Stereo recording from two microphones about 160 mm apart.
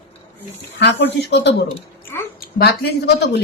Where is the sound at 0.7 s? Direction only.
90° left.